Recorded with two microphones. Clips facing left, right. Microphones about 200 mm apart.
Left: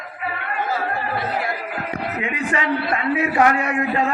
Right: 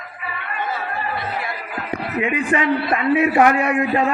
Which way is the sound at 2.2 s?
25° right (ahead or behind).